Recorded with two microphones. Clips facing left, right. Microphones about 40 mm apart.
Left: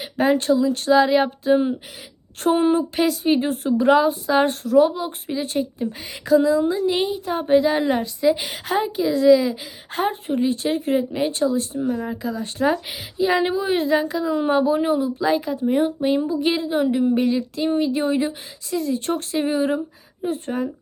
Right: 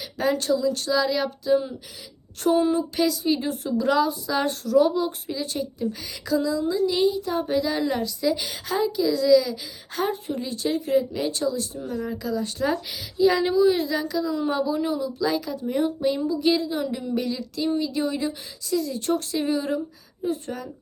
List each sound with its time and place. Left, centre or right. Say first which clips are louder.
0.0 s a woman's voice: left 5 dB; left